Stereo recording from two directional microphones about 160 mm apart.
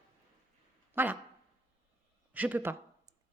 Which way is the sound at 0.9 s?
10° right (ahead or behind).